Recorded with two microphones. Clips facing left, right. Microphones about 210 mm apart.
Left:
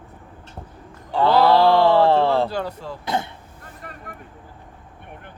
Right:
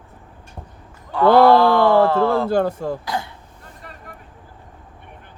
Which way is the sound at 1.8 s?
30° left (ahead or behind).